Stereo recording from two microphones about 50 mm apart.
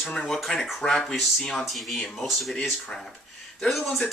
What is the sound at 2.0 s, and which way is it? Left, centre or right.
Speech, centre.